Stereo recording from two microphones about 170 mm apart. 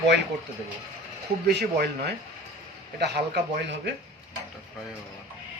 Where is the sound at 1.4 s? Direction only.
70° right (ahead or behind).